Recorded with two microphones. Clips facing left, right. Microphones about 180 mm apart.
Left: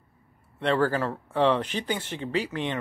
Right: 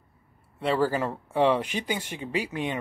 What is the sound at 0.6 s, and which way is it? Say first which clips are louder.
Speech: left 1 dB; 10° right (ahead or behind).